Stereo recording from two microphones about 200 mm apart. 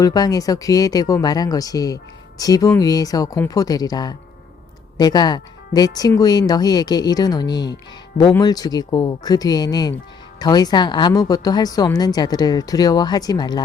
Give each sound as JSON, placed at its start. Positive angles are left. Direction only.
{"t": 0.0, "sound": "a woman's voice", "side_deg": 20}